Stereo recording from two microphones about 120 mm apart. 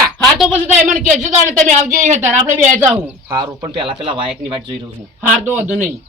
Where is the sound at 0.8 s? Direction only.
90° right.